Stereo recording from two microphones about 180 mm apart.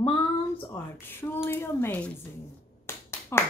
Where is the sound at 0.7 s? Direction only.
10° left (ahead or behind).